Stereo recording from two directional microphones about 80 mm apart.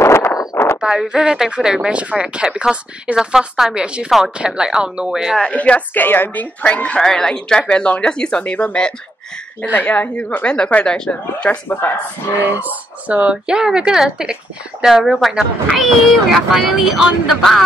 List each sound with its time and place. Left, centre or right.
0.0 s a sound: left
0.7 s speech: centre
5.4 s speech: centre
7.0 s speech: centre; by 12.0 s left
12.4 s speech: right; by 17.6 s centre